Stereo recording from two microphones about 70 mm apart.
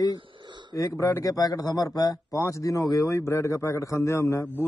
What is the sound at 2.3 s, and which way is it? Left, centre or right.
A man's voice, left.